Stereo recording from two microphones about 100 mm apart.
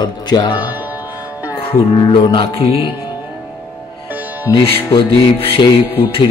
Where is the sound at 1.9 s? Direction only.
55° left (ahead or behind).